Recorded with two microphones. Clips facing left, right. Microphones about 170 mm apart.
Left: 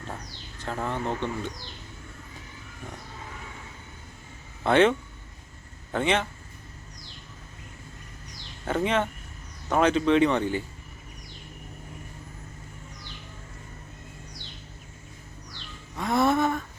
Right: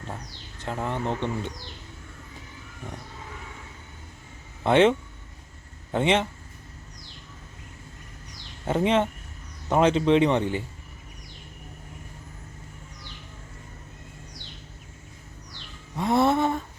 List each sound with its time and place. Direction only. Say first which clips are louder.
0.6 s speech: right 1 dB; 15° right (ahead or behind)
4.6 s speech: right 1 dB; 20° right (ahead or behind)
8.6 s speech: right 3 dB; 25° right (ahead or behind)
16.0 s music: right 2 dB; 30° right (ahead or behind)